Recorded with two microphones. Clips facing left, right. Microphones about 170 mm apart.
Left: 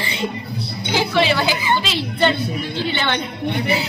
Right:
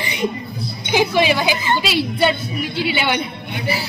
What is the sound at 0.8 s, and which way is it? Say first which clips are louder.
A woman's voice: right 2 dB; 15° right (ahead or behind).